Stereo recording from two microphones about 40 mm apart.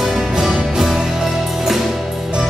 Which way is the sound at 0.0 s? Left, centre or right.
Centre.